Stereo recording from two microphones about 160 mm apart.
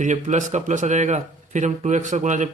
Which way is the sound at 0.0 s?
50° right (ahead or behind).